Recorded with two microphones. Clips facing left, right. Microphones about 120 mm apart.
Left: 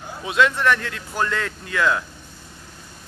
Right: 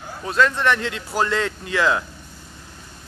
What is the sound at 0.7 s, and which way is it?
Speech, 25° right (ahead or behind).